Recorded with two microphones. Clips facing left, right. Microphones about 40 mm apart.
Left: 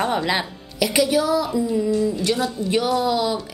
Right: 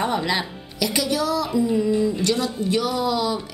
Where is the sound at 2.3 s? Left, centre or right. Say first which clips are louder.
Left 1 dB; left.